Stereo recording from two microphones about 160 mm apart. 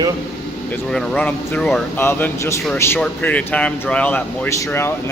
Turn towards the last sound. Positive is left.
turn(degrees=15)  # may be behind; listen again after turning